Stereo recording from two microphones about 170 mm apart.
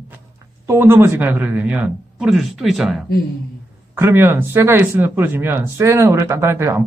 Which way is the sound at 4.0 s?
15° right (ahead or behind).